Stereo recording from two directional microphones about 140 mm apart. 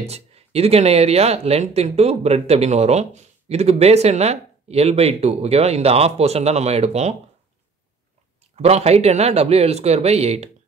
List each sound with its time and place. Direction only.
0.0 s speech: 50° right (ahead or behind)
8.5 s speech: 50° right (ahead or behind)